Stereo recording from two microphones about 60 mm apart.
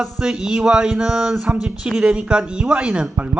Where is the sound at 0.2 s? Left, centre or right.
Centre.